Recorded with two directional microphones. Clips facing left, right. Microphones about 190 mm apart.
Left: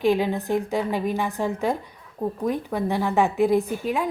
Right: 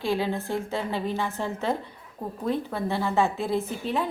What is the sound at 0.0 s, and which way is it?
A woman's voice, 15° left (ahead or behind).